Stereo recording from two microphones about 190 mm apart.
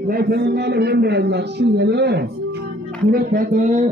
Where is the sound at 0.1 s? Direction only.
55° right (ahead or behind).